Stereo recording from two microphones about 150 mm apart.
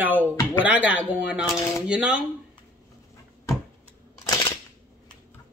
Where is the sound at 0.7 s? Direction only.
10° right (ahead or behind).